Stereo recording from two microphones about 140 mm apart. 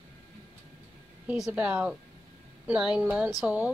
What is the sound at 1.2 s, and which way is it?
Speech, 5° right (ahead or behind).